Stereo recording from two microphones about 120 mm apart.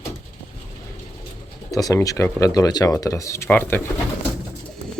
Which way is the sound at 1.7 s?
30° left (ahead or behind).